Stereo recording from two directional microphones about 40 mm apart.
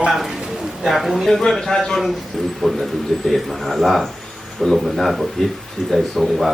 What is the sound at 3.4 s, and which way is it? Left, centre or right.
Speech, centre.